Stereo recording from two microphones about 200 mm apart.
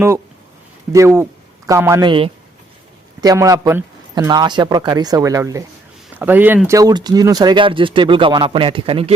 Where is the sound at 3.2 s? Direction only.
15° right (ahead or behind).